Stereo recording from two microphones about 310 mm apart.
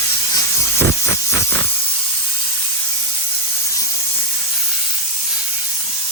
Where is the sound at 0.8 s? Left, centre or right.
Right.